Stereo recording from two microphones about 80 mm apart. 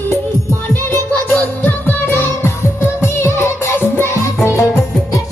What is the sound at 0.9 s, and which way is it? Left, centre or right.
Music, left.